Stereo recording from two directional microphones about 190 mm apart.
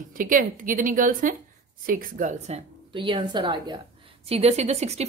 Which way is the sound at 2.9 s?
25° right (ahead or behind).